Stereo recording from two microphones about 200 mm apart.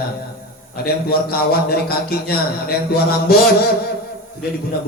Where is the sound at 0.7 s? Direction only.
50° left (ahead or behind).